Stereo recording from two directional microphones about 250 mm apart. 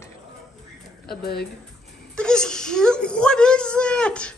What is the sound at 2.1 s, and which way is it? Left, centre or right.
Whimper, centre.